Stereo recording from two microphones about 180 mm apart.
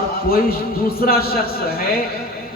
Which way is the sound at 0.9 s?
55° left (ahead or behind).